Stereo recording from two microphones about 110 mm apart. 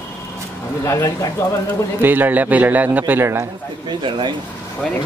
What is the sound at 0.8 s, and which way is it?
Speech, 30° left (ahead or behind).